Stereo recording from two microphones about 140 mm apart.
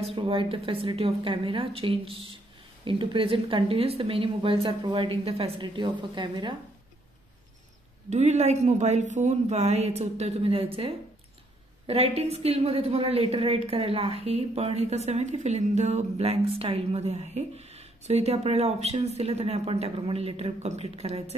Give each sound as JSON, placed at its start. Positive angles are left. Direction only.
{"t": 0.0, "sound": "speech", "side_deg": -40}
{"t": 8.1, "sound": "a woman's voice", "side_deg": -55}